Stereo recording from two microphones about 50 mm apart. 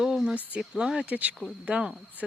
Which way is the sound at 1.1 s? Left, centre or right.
Right.